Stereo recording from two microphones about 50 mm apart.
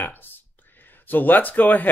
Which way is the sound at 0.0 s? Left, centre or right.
Left.